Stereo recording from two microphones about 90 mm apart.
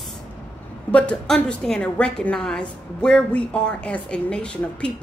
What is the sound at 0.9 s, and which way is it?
A woman's voice, 10° left (ahead or behind).